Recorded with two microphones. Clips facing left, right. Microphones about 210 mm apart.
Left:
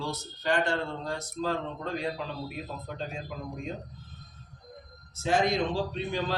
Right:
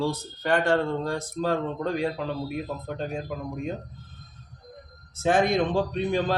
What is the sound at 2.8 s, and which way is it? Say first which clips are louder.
Speech: right 6 dB; 50° right (ahead or behind).